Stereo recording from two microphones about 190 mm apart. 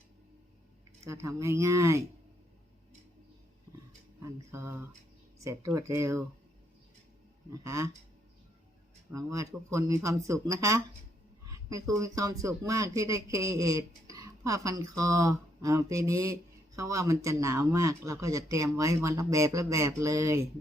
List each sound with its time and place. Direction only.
1.0 s speech: 15° right (ahead or behind)
4.2 s speech: 15° right (ahead or behind)
7.5 s speech: 15° right (ahead or behind)
9.1 s speech: 15° right (ahead or behind)